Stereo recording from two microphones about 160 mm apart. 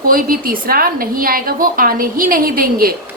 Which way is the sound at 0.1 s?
60° right (ahead or behind).